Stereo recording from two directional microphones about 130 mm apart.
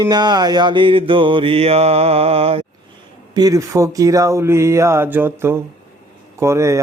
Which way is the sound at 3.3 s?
30° right (ahead or behind).